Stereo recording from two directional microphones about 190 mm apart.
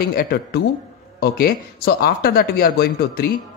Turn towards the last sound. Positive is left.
turn(degrees=55)  # may be behind; listen again after turning